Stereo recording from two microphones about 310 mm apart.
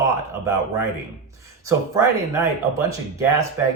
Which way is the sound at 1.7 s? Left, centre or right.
Centre.